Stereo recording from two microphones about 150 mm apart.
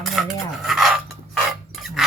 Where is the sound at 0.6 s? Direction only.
Centre (ahead or behind).